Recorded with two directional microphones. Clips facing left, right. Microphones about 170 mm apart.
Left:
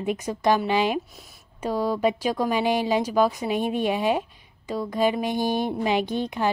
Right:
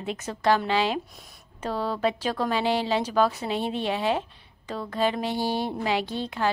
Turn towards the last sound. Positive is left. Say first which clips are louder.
# left 3 dB
turn(degrees=15)  # may be behind; listen again after turning